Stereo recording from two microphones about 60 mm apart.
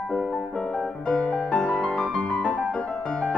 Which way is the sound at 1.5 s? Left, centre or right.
Left.